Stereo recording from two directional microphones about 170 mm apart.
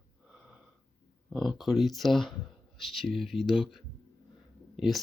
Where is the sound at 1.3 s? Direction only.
Centre (ahead or behind).